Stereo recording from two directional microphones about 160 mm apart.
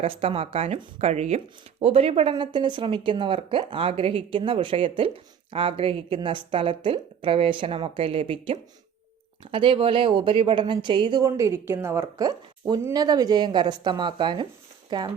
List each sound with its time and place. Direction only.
0.0 s a woman's voice: 35° right (ahead or behind)